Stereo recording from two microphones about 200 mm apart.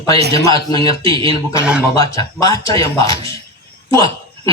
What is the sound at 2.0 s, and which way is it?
Speech, 15° left (ahead or behind).